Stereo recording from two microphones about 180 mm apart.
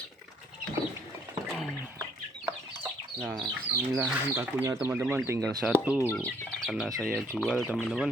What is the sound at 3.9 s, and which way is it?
Speech, 5° right (ahead or behind).